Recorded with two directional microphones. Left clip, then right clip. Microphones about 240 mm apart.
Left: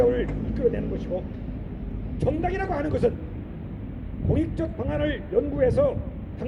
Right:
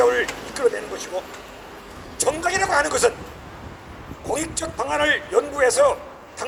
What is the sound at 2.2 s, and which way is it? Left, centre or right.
Speech, right.